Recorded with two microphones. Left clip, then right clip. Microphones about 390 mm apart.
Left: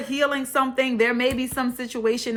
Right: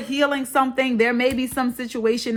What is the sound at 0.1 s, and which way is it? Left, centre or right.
Speech, centre.